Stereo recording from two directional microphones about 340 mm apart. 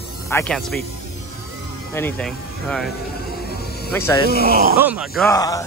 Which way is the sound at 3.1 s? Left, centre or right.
Left.